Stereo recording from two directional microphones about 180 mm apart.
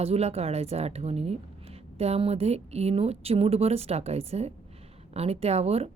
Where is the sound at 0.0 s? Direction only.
35° right (ahead or behind).